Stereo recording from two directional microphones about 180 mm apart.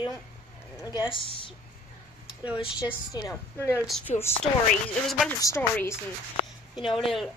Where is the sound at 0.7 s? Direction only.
20° left (ahead or behind).